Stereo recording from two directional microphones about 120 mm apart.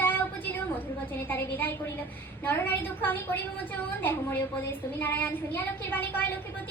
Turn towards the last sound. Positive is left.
turn(degrees=15)  # may be behind; listen again after turning